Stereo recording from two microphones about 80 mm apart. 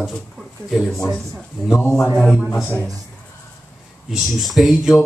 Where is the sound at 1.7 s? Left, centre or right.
Left.